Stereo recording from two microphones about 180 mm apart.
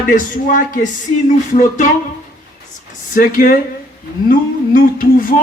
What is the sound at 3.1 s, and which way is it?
Speech, 50° left (ahead or behind).